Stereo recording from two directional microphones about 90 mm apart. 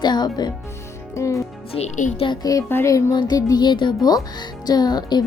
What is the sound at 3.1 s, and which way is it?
A woman's voice, 50° left (ahead or behind).